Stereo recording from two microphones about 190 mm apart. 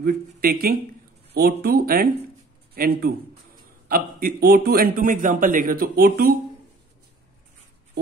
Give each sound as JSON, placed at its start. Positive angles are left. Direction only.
{"t": 0.0, "sound": "a man's voice", "side_deg": -50}